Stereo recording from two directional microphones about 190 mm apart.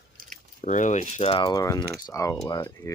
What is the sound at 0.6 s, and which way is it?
Speech, 40° left (ahead or behind).